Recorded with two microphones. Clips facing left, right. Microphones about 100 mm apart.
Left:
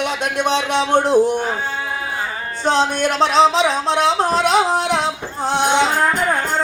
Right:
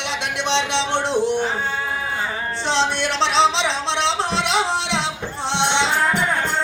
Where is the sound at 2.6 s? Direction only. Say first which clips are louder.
Left 5 dB; 45° left (ahead or behind).